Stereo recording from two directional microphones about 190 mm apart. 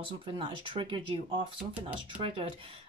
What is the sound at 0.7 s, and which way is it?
Speech, 25° right (ahead or behind).